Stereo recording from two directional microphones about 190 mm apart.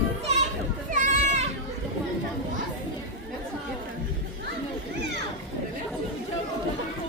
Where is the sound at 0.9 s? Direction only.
40° right (ahead or behind).